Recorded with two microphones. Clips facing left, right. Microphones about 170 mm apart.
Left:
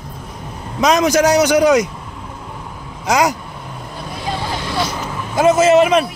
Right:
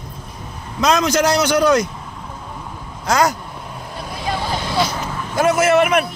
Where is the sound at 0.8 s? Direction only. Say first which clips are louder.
Left 3 dB; 15° left (ahead or behind).